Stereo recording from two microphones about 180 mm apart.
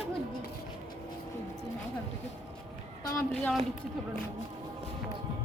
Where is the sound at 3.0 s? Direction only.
15° left (ahead or behind).